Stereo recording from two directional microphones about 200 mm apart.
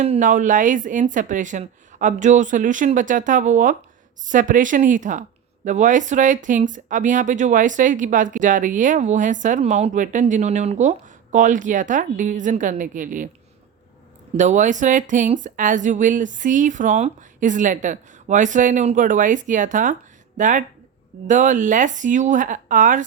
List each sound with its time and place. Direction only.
0.0 s speech: 35° right (ahead or behind)
14.3 s speech: 35° right (ahead or behind)